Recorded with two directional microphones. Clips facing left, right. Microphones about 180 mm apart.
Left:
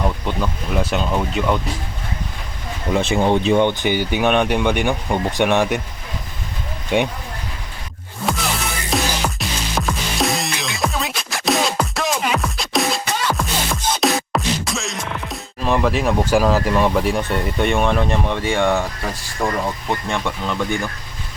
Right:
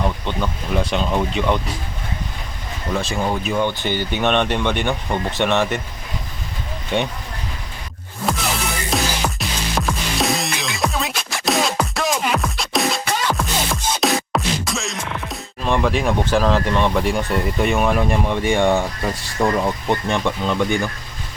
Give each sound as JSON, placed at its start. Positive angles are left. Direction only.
{"t": 0.0, "sound": "speech", "side_deg": 5}
{"t": 2.9, "sound": "speech", "side_deg": 20}
{"t": 6.9, "sound": "speech", "side_deg": 10}
{"t": 8.9, "sound": "music", "side_deg": 0}
{"t": 19.4, "sound": "speech", "side_deg": 0}
{"t": 20.1, "sound": "speech", "side_deg": -20}